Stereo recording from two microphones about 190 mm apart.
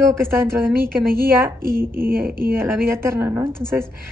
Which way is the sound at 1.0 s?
50° right (ahead or behind).